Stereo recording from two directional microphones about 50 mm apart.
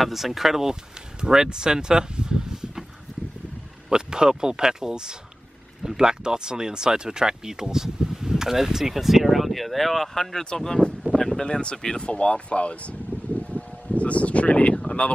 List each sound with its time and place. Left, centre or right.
0.0 s speech: centre
3.9 s speech: centre; by 12.9 s left
13.4 s a sound: left
14.9 s speech: left